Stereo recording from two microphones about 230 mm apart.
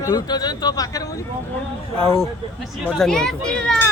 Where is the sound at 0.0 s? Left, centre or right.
Centre.